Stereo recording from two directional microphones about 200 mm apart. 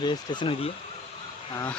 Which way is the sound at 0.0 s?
25° left (ahead or behind).